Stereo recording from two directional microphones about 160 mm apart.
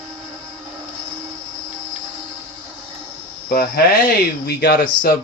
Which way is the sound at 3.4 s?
75° left (ahead or behind).